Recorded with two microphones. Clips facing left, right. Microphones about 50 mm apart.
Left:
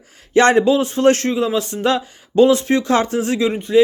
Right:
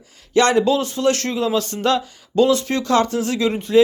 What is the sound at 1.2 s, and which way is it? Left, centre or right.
Speech, centre.